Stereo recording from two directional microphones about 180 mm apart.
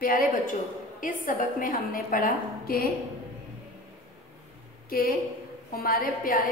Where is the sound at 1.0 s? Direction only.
50° left (ahead or behind).